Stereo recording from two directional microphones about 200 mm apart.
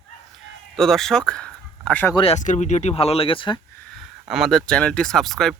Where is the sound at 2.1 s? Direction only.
30° left (ahead or behind).